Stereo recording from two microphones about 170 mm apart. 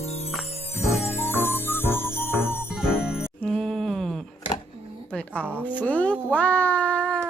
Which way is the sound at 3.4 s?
5° left (ahead or behind).